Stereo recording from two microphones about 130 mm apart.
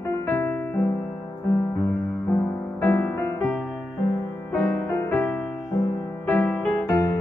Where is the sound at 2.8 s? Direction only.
15° left (ahead or behind).